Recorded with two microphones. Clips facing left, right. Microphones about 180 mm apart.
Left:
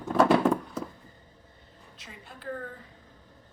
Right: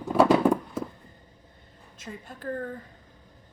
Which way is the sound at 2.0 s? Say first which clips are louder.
Right 8 dB; 45° right (ahead or behind).